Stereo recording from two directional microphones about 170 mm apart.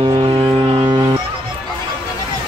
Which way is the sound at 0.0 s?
30° right (ahead or behind).